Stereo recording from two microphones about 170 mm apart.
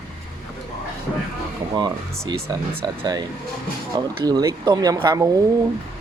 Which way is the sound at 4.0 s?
25° right (ahead or behind).